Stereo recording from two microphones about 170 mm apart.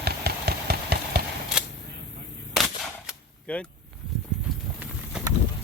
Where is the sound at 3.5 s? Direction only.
10° left (ahead or behind).